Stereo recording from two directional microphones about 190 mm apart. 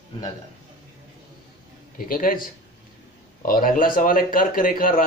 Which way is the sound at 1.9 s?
50° left (ahead or behind).